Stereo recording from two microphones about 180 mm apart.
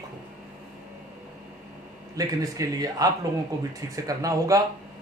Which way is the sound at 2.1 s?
20° right (ahead or behind).